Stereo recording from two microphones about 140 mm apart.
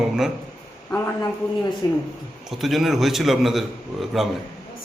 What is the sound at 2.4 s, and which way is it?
A man's voice, centre (ahead or behind).